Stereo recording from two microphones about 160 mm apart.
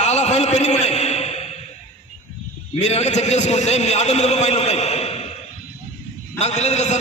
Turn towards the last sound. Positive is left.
turn(degrees=45)  # may be behind; listen again after turning